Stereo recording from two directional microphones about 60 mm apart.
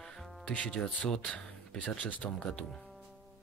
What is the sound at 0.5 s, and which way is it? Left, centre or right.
Speech, centre.